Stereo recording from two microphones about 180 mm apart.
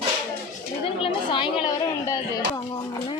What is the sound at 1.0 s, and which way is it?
Chatter, 30° left (ahead or behind).